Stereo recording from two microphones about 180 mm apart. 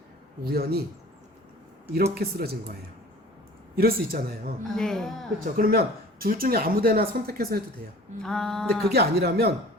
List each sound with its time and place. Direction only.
0.4 s speech: 60° right (ahead or behind)
2.1 s speech: 60° right (ahead or behind)
3.8 s speech: 55° right (ahead or behind)
4.7 s a sound: centre (ahead or behind)
5.5 s speech: 55° right (ahead or behind)
8.2 s a sound: 5° left (ahead or behind)
8.9 s speech: 65° right (ahead or behind)